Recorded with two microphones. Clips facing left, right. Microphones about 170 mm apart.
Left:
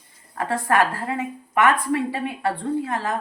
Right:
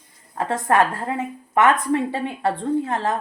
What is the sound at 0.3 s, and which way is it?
A woman's voice, 20° right (ahead or behind).